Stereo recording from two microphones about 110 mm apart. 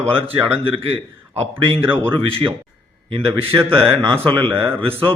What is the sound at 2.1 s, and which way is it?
Speech, 55° right (ahead or behind).